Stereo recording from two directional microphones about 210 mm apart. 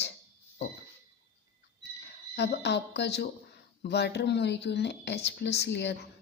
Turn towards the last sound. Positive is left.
turn(degrees=55)  # may be behind; listen again after turning